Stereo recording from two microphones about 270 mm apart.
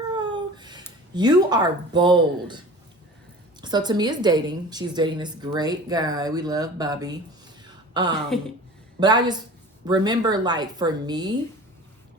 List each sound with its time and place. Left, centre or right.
0.1 s a sound: centre
1.1 s a woman's voice: centre
3.6 s a woman's voice: centre
8.3 s speech: centre
9.0 s a woman's voice: centre